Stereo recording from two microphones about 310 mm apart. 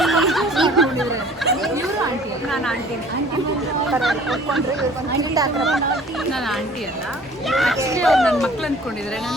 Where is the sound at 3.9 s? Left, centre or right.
Centre.